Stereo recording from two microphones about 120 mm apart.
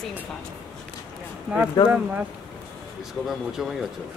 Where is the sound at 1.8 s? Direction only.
30° left (ahead or behind).